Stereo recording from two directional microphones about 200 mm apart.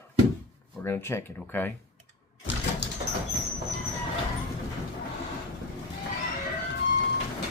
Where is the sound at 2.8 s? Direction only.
60° left (ahead or behind).